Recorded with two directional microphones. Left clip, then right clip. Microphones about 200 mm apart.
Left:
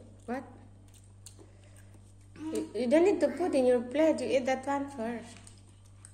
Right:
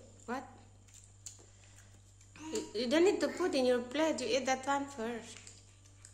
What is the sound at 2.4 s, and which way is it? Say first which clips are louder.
A woman's voice: left 5 dB; 15° right (ahead or behind).